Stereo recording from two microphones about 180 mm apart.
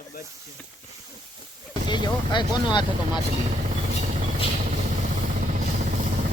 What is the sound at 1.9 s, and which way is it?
Speech, 25° left (ahead or behind).